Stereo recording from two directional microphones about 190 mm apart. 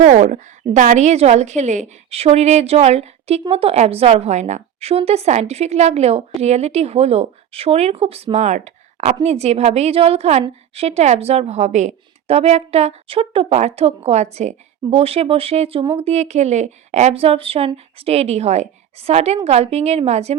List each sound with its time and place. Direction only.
0.0 s a woman's voice: 40° right (ahead or behind)